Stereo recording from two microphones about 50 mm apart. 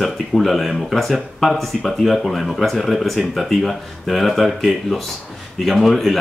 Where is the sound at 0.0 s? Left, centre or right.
Centre.